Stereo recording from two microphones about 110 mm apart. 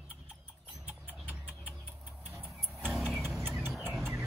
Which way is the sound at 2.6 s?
5° left (ahead or behind).